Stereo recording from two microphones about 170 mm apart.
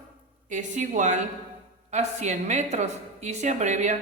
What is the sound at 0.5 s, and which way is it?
A woman's voice, 45° right (ahead or behind).